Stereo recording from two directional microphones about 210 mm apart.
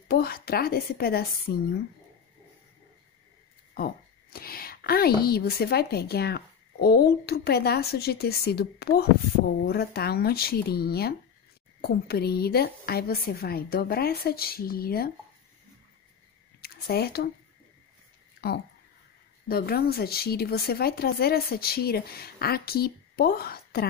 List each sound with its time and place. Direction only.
0.1 s a woman's voice: 50° left (ahead or behind)
3.7 s a woman's voice: 45° left (ahead or behind)
16.6 s speech: 50° left (ahead or behind)
18.4 s a woman's voice: 50° left (ahead or behind)